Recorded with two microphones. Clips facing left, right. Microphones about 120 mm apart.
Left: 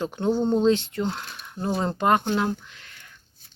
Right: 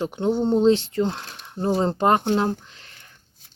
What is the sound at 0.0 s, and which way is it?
Speech, 20° right (ahead or behind).